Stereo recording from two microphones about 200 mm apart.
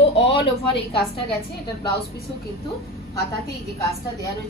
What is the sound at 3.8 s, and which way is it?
Speech, 15° left (ahead or behind).